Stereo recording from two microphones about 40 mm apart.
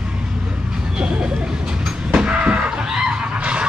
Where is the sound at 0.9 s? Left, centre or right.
Right.